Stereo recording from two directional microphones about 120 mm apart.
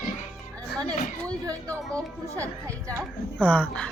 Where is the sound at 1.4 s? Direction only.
25° right (ahead or behind).